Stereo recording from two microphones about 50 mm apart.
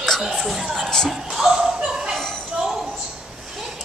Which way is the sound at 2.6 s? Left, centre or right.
Centre.